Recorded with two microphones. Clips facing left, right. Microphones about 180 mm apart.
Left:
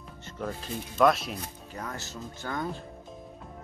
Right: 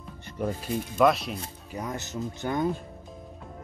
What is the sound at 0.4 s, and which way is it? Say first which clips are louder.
Speech: right 5 dB; 10° right (ahead or behind).